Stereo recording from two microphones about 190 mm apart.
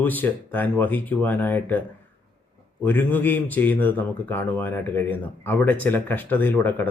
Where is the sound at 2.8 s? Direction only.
10° left (ahead or behind).